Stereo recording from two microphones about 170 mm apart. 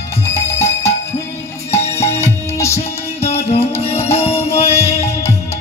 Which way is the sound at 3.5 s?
35° left (ahead or behind).